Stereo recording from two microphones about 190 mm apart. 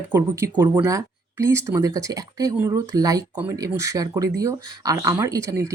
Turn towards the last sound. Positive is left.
turn(degrees=-15)  # may be behind; listen again after turning